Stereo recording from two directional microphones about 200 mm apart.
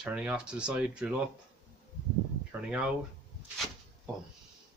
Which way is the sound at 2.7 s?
5° right (ahead or behind).